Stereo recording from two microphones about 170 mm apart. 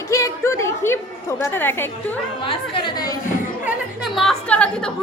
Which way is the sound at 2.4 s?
30° left (ahead or behind).